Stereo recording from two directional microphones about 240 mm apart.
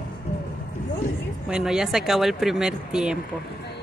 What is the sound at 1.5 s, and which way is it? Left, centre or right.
Speech, centre.